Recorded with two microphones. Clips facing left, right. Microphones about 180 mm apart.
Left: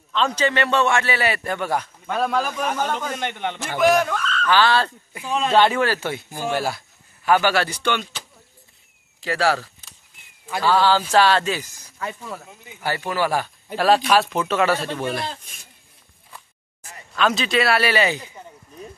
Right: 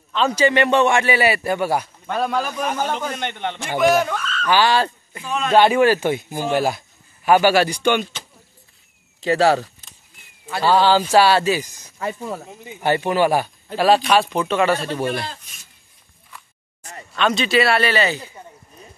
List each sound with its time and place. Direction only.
0.1 s a man's voice: 5° right (ahead or behind)
9.2 s a man's voice: 20° right (ahead or behind)
12.0 s speech: 30° right (ahead or behind)
13.7 s speech: centre (ahead or behind)
17.1 s speech: centre (ahead or behind)